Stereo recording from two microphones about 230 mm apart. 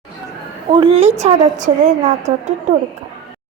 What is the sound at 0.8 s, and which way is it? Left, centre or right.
A woman's voice, right.